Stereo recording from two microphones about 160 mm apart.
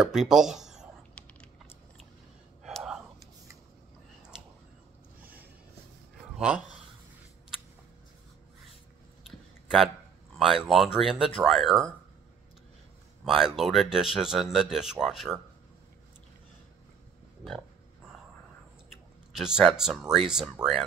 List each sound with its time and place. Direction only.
0.0 s speech: 5° right (ahead or behind)
2.6 s whispering: 5° right (ahead or behind)
6.3 s speech: 5° right (ahead or behind)
10.4 s speech: 5° right (ahead or behind)
13.2 s speech: centre (ahead or behind)
19.3 s speech: 5° right (ahead or behind)